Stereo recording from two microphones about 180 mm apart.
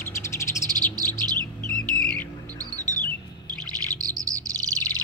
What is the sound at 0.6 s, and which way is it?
Bird, 20° right (ahead or behind).